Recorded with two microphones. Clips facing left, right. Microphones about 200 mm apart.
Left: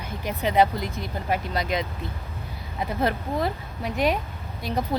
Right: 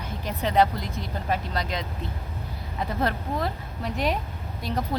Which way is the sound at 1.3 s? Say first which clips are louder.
Left 4 dB; 10° left (ahead or behind).